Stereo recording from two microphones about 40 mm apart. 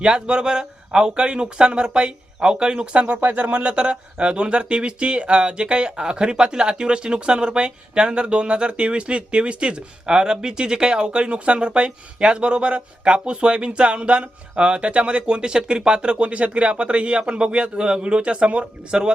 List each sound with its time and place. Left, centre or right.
0.0 s speech: right
2.8 s speech: right